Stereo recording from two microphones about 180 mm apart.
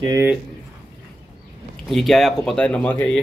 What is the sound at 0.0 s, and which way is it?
Speech, 20° right (ahead or behind).